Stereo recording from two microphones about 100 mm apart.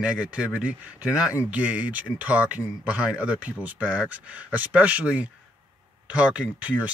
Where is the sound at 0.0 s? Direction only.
10° right (ahead or behind).